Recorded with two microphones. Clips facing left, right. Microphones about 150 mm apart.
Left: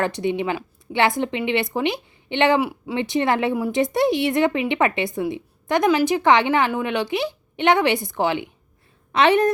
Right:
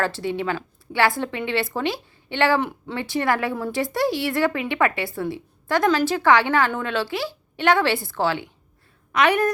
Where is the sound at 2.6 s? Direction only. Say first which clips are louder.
Left 3 dB; 10° left (ahead or behind).